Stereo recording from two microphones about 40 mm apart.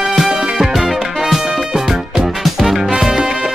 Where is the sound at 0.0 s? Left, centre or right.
Centre.